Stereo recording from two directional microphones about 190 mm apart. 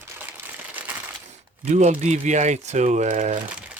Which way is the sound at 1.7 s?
40° right (ahead or behind).